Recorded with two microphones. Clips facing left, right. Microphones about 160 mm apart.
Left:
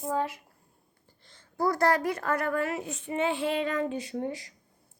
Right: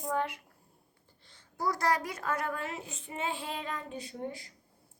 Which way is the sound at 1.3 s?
50° left (ahead or behind).